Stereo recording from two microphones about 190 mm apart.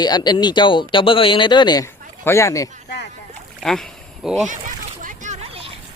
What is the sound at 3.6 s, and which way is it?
Speech, centre (ahead or behind).